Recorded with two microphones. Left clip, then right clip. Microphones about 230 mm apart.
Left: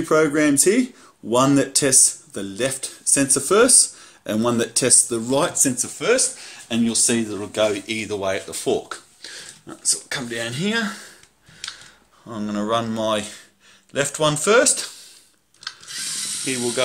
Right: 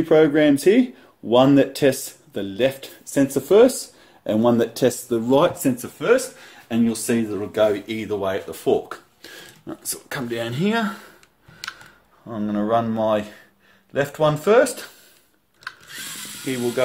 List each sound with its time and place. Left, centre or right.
0.2 s speech: centre
9.2 s speech: centre
12.3 s speech: centre
16.4 s speech: centre